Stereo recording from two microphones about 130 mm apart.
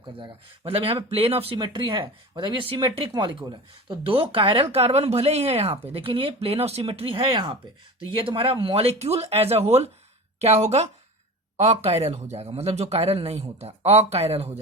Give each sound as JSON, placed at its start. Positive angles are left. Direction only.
{"t": 0.2, "sound": "a woman's voice", "side_deg": -45}